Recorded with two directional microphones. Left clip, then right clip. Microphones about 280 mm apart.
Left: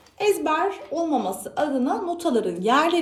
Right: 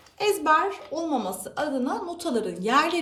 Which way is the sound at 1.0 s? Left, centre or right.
Centre.